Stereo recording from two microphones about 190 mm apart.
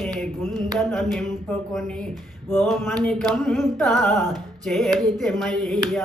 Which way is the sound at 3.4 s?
Centre (ahead or behind).